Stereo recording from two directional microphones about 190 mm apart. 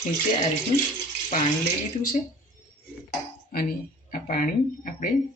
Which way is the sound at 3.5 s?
55° left (ahead or behind).